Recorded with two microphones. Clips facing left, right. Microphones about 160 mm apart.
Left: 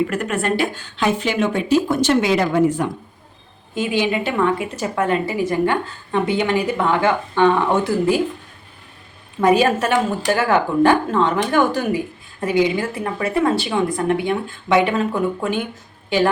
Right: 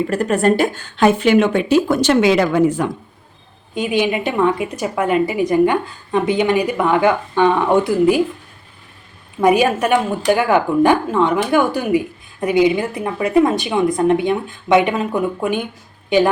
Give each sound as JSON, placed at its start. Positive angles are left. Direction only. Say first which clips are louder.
{"t": 0.1, "sound": "a woman's voice", "louder": "right 6 dB", "side_deg": -35}
{"t": 3.8, "sound": "a woman's voice", "louder": "right 2 dB", "side_deg": -15}
{"t": 9.4, "sound": "a woman's voice", "louder": "right 1 dB", "side_deg": -15}